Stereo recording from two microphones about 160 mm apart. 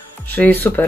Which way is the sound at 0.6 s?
10° left (ahead or behind).